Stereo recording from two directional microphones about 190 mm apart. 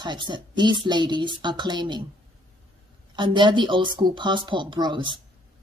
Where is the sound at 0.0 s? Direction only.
25° right (ahead or behind).